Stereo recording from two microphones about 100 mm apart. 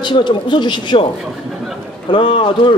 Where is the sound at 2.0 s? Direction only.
55° left (ahead or behind).